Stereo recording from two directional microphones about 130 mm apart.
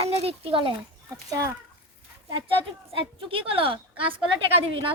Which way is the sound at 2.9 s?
45° right (ahead or behind).